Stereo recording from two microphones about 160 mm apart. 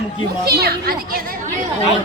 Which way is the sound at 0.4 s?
80° right.